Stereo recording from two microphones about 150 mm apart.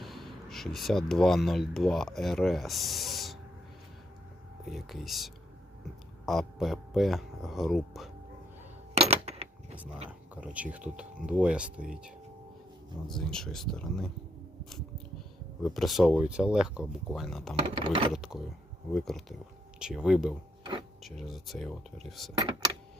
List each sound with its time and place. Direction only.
0.0 s speech: centre (ahead or behind)
4.7 s speech: centre (ahead or behind)
9.0 s a sound: 45° right (ahead or behind)
10.1 s speech: 10° right (ahead or behind)
13.1 s speech: 5° left (ahead or behind)
15.6 s speech: centre (ahead or behind)
17.7 s ratchet: 35° right (ahead or behind)
18.1 s speech: centre (ahead or behind)